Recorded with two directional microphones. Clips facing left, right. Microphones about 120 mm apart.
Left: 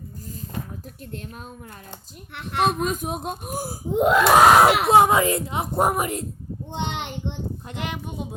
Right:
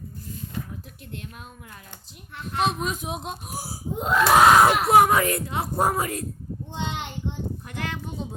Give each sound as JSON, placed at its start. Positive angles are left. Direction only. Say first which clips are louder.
{"t": 2.3, "sound": "screaming", "louder": "left 3 dB", "side_deg": 70}
{"t": 2.6, "sound": "speech", "louder": "left 5 dB", "side_deg": 45}
{"t": 3.9, "sound": "screaming", "louder": "left 3 dB", "side_deg": 75}
{"t": 4.9, "sound": "a child's voice", "louder": "left 1 dB", "side_deg": 20}
{"t": 6.7, "sound": "screaming", "louder": "left 3 dB", "side_deg": 65}
{"t": 7.7, "sound": "speech", "louder": "left 1 dB", "side_deg": 20}